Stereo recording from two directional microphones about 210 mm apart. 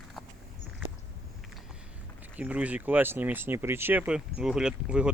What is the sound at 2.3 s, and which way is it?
Speech, 5° right (ahead or behind).